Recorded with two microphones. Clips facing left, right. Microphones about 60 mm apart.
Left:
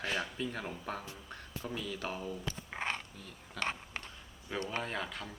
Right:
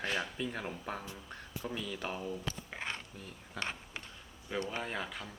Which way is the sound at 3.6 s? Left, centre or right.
Left.